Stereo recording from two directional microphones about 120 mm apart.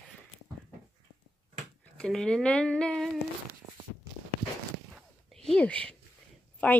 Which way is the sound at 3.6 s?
25° right (ahead or behind).